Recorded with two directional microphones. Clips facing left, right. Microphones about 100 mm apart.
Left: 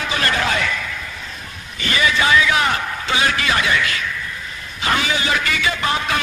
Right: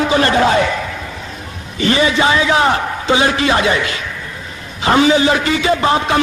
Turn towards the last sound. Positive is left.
turn(degrees=-30)  # may be behind; listen again after turning